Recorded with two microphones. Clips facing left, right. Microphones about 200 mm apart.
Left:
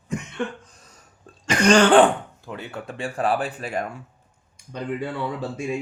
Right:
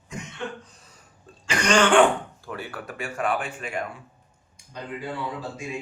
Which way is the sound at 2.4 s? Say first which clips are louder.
Left 1 dB; 20° left (ahead or behind).